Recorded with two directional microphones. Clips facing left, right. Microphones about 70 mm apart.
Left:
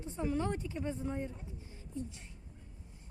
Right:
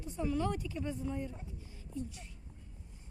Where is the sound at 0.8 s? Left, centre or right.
Left.